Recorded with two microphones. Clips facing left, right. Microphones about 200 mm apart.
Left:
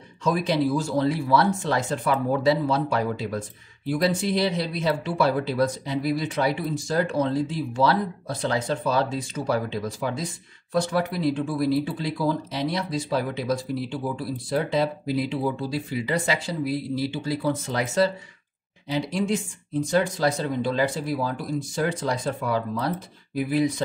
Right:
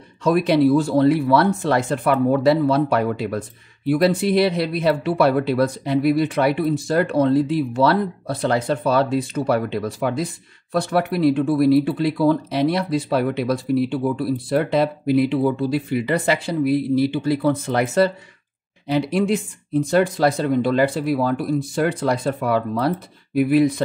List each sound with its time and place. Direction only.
0.2 s speech: 60° right (ahead or behind)